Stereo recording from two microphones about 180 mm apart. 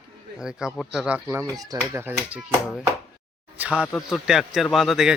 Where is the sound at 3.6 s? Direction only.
5° right (ahead or behind).